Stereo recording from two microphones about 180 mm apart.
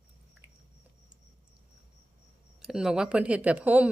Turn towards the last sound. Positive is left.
turn(degrees=-10)  # may be behind; listen again after turning